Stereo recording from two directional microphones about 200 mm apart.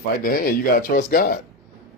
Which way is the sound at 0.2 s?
45° left (ahead or behind).